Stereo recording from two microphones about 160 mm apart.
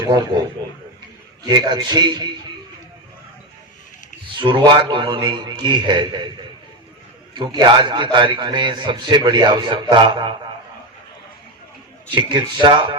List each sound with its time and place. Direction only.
0.1 s a man's voice: 25° right (ahead or behind)
1.5 s a man's voice: 30° right (ahead or behind)
4.4 s a man's voice: 30° right (ahead or behind)
7.3 s a man's voice: 30° right (ahead or behind)
12.1 s a man's voice: 30° right (ahead or behind)